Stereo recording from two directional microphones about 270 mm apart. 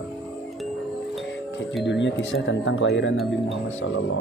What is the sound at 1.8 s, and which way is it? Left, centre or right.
Speech, left.